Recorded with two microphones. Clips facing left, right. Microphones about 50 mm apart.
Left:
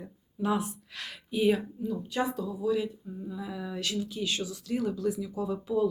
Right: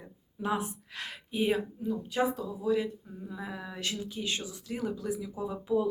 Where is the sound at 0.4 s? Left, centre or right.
Right.